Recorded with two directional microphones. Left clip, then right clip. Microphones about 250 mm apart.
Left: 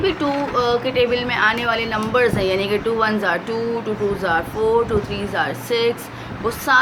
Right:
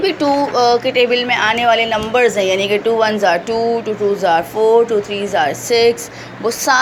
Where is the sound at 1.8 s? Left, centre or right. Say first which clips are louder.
Right 4 dB; centre.